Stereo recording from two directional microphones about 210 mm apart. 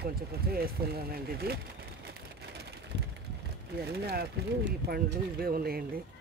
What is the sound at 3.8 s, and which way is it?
Speech, 50° right (ahead or behind).